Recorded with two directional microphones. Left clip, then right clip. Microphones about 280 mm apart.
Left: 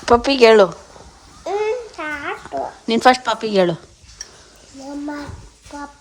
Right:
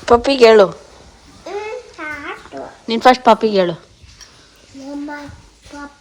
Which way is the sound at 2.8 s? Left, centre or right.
Centre.